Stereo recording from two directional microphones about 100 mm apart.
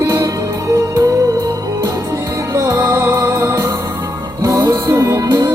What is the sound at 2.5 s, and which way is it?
Music, 35° right (ahead or behind).